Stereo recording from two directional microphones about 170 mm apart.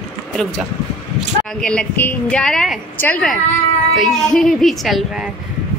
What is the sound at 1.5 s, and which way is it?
A woman's voice, 5° left (ahead or behind).